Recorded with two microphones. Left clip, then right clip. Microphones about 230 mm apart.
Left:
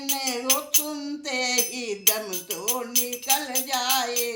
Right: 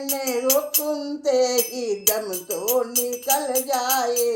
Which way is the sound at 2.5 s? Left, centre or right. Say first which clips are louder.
Right 9 dB; left.